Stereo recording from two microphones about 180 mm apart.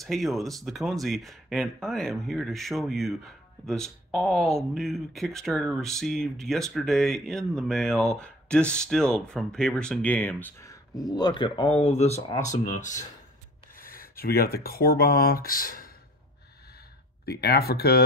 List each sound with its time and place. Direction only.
0.0 s speech: centre (ahead or behind); by 13.0 s 45° left (ahead or behind)
13.7 s speech: 55° left (ahead or behind)
17.2 s speech: 60° left (ahead or behind)